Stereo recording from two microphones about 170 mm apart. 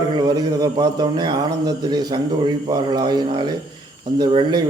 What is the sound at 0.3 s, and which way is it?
A man's voice, 20° right (ahead or behind).